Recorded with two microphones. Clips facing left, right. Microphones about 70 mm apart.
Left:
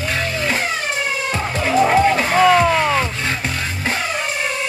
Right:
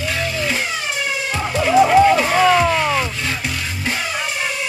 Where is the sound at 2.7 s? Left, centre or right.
Centre.